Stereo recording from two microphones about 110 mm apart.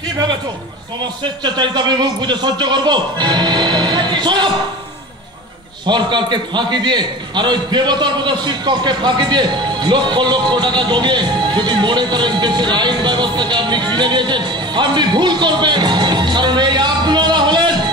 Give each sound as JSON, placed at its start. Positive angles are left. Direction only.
{"t": 1.4, "sound": "a man's voice", "side_deg": -45}
{"t": 5.9, "sound": "a man's voice", "side_deg": -45}